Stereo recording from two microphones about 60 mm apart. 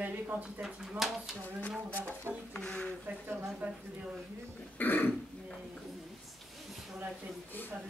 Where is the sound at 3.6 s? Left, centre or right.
Right.